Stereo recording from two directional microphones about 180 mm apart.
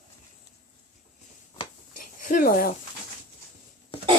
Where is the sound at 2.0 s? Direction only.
50° left (ahead or behind).